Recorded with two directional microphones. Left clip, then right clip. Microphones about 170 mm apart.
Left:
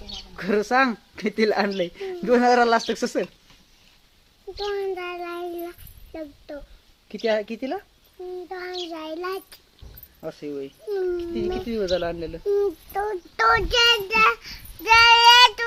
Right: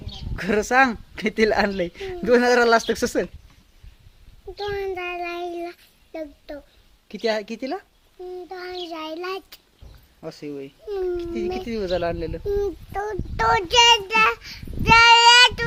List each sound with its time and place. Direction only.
0.3 s a woman's voice: 40° right (ahead or behind)
4.5 s child singing: 20° right (ahead or behind)
6.1 s speech: 15° right (ahead or behind)
7.1 s a woman's voice: 30° right (ahead or behind)
8.4 s a child's voice: 5° right (ahead or behind)
10.2 s a child's voice: 15° right (ahead or behind); by 13.7 s centre (ahead or behind)
13.7 s child singing: 15° right (ahead or behind)